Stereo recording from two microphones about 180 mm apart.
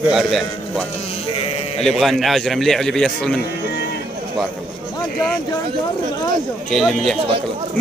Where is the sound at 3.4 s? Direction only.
70° left (ahead or behind).